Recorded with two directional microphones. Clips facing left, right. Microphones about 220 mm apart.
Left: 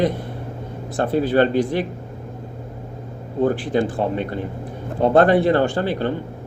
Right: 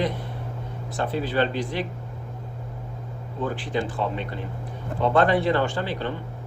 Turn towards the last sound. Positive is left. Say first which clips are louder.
# left 6 dB
turn(degrees=45)  # may be behind; listen again after turning